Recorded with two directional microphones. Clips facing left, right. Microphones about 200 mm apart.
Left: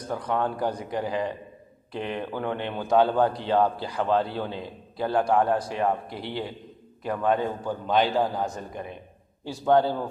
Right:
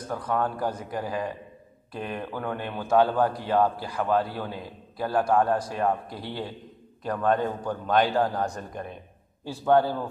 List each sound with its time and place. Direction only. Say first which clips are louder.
0.3 s a man's voice: left 1 dB; 25° left (ahead or behind); by 8.8 s 5° left (ahead or behind)
9.4 s a man's voice: even; 15° left (ahead or behind)